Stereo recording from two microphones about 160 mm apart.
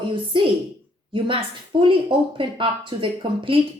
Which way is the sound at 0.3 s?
30° right (ahead or behind).